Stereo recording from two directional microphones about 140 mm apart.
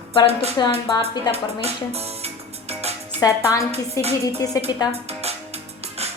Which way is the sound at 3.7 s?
50° right (ahead or behind).